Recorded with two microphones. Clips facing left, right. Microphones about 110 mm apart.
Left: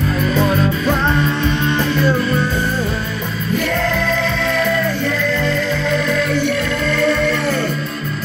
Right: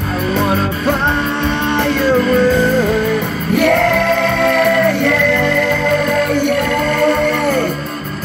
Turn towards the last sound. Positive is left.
turn(degrees=-50)  # may be behind; listen again after turning